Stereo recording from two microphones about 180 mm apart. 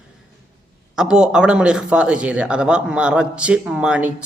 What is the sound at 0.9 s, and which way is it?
Mantra, 5° right (ahead or behind).